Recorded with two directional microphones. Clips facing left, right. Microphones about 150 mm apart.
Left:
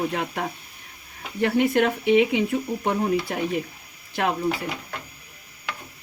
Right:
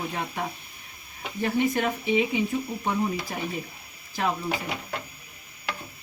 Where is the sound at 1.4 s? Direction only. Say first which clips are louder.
Left 5 dB; 70° left (ahead or behind).